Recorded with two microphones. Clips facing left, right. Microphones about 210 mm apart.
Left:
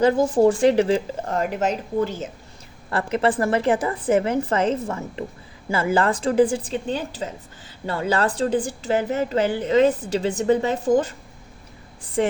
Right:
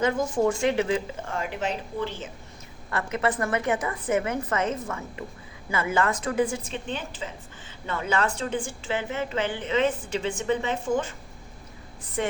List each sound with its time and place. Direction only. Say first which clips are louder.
0.0 s a woman's voice: left 7 dB; 35° left (ahead or behind)
2.9 s a woman's voice: left 5 dB; 30° left (ahead or behind)